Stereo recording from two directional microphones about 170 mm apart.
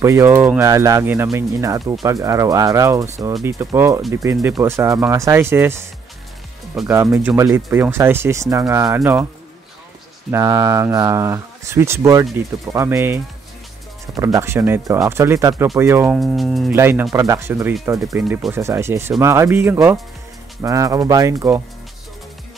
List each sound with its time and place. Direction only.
0.0 s speech: 15° right (ahead or behind)
6.9 s speech: 15° right (ahead or behind)
10.3 s speech: 20° right (ahead or behind)
16.2 s speech: centre (ahead or behind)
16.7 s speech: 15° right (ahead or behind)